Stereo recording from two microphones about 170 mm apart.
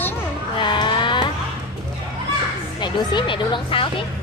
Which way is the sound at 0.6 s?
25° left (ahead or behind).